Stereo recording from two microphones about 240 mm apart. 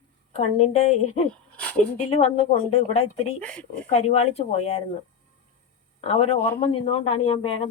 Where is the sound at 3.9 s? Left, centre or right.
Left.